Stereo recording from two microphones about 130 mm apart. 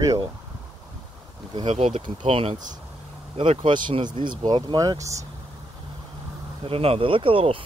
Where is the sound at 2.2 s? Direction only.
45° right (ahead or behind); by 5.2 s 25° right (ahead or behind).